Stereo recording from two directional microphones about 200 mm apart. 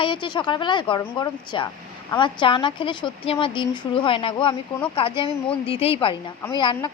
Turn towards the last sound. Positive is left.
turn(degrees=20)  # may be behind; listen again after turning